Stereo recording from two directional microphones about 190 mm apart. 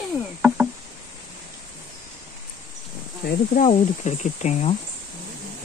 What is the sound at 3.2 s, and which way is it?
Speech, 45° left (ahead or behind).